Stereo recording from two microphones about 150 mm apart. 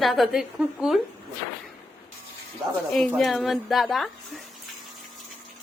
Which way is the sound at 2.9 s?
Centre (ahead or behind).